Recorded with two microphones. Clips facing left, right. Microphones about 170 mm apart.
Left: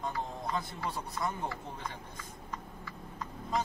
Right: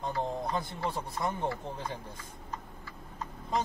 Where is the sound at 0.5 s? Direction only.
30° right (ahead or behind).